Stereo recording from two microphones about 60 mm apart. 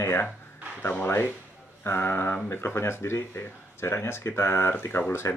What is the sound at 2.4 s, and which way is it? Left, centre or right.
Speech, left.